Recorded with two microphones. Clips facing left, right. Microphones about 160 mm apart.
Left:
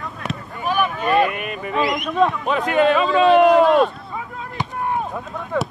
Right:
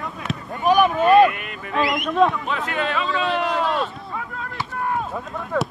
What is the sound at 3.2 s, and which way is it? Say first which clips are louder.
Speech: left 13 dB; 55° left (ahead or behind).